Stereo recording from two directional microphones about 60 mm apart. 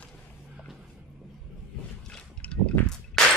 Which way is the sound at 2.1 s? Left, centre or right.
Centre.